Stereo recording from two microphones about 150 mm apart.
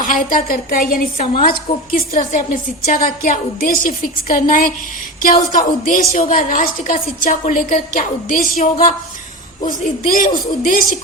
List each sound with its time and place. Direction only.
0.0 s a woman's voice: 65° left (ahead or behind)